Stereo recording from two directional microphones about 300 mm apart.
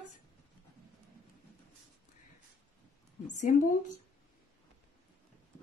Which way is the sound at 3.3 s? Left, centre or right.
Left.